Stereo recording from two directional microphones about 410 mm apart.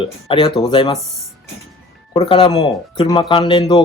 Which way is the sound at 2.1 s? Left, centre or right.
Centre.